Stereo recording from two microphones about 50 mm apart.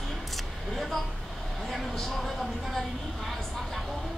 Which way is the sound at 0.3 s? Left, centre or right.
Centre.